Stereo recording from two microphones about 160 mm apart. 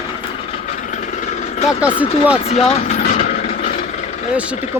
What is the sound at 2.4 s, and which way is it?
Speech, 40° left (ahead or behind).